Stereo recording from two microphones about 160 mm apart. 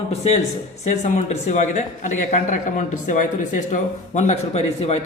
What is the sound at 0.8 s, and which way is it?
A man's voice, 45° left (ahead or behind).